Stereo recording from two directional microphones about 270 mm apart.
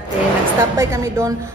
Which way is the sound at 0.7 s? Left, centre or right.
Centre.